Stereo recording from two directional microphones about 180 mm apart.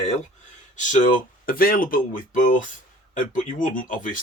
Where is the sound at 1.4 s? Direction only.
55° left (ahead or behind).